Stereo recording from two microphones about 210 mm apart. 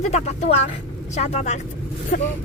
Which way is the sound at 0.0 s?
30° left (ahead or behind).